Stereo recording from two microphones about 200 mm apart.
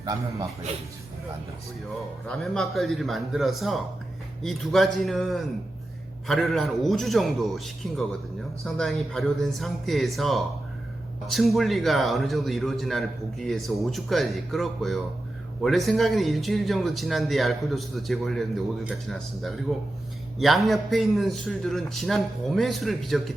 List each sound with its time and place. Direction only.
0.0 s a man's voice: 20° right (ahead or behind)
2.2 s a man's voice: 5° left (ahead or behind)